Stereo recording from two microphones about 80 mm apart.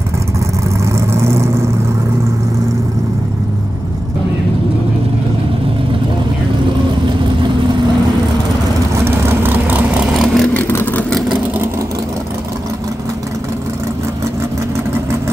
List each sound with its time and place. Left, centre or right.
0.9 s vehicle: right
9.0 s vehicle: right
10.1 s vehicle: centre
10.7 s vehicle: left
11.1 s vehicle: centre